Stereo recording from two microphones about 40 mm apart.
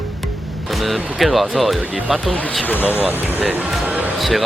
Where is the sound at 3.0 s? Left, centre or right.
Right.